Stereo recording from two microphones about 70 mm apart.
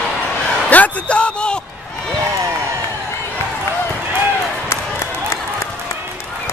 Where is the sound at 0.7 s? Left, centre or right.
Centre.